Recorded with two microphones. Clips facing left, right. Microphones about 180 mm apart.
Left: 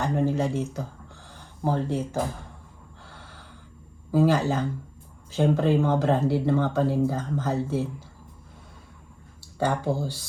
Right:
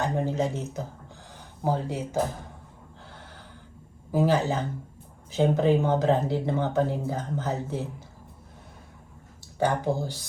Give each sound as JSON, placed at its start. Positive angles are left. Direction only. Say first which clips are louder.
{"t": 0.0, "sound": "speech", "louder": "left 2 dB", "side_deg": -20}
{"t": 3.1, "sound": "a sound", "louder": "even", "side_deg": -15}
{"t": 4.1, "sound": "speech", "louder": "left 2 dB", "side_deg": -20}
{"t": 9.6, "sound": "speech", "louder": "even", "side_deg": -15}